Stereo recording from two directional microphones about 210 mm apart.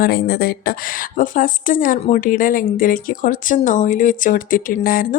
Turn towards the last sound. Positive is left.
turn(degrees=45)  # may be behind; listen again after turning